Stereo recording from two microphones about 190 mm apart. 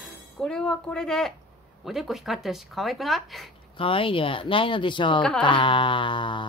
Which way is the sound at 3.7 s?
30° left (ahead or behind).